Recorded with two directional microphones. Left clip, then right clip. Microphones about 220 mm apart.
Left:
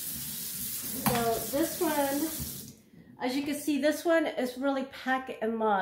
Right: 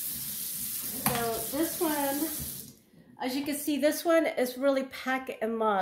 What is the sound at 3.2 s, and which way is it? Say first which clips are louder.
Speech: left 1 dB; 30° right (ahead or behind).